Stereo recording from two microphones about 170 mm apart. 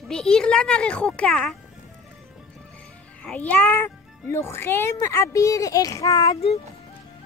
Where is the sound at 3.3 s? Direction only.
10° left (ahead or behind).